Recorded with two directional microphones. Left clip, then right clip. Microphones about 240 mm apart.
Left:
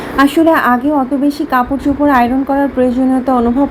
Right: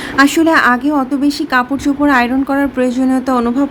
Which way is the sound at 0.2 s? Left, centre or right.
Centre.